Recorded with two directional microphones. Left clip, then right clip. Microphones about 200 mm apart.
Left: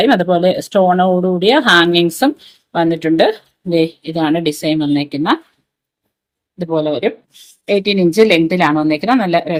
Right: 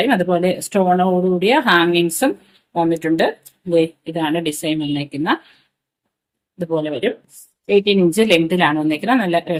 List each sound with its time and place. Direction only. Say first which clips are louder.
0.0 s speech: left 5 dB; 25° left (ahead or behind)
6.6 s speech: left 4 dB; 25° left (ahead or behind)